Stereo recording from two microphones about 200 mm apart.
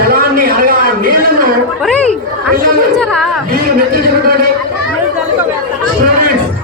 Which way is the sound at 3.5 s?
50° right (ahead or behind).